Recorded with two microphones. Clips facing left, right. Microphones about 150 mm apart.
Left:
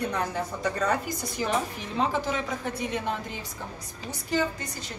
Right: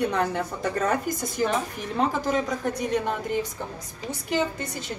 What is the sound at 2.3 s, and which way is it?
A woman's voice, 45° right (ahead or behind).